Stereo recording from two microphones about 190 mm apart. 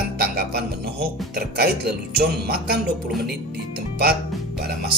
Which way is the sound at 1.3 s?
55° right (ahead or behind).